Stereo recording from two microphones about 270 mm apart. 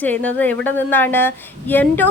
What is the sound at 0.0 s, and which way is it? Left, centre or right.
A woman's voice, centre.